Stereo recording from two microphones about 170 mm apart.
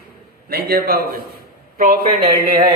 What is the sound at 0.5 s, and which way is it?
A man's voice, 60° right (ahead or behind).